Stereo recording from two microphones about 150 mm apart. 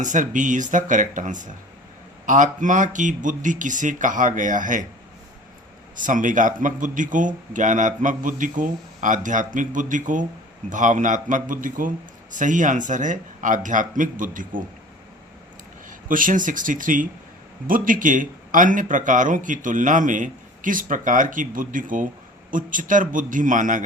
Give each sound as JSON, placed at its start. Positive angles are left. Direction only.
{"t": 0.0, "sound": "speech", "side_deg": -55}
{"t": 6.0, "sound": "speech", "side_deg": -60}
{"t": 15.9, "sound": "speech", "side_deg": -65}